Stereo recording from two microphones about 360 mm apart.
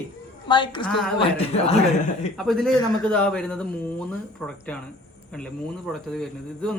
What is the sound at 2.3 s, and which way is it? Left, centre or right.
A man's voice, centre.